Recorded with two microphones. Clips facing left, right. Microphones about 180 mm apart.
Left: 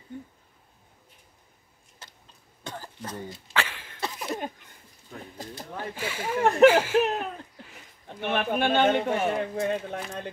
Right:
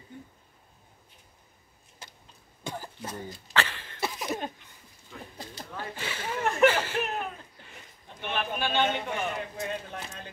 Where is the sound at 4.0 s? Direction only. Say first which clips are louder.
Even; 5° right (ahead or behind).